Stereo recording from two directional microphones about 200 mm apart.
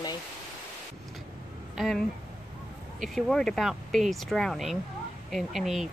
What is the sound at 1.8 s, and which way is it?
Speech, centre (ahead or behind).